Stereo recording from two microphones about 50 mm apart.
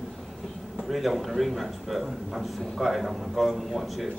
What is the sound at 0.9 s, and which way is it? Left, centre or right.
Speech, centre.